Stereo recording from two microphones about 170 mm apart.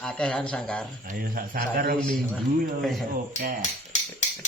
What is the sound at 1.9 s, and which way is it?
A man's voice, centre (ahead or behind).